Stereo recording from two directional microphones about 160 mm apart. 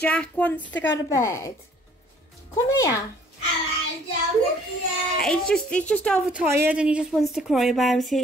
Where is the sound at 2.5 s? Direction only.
20° left (ahead or behind).